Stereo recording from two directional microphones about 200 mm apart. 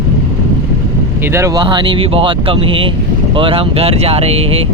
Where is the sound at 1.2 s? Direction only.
15° right (ahead or behind); by 4.6 s 30° right (ahead or behind).